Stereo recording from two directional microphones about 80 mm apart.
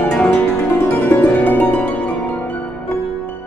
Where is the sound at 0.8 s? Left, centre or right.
Left.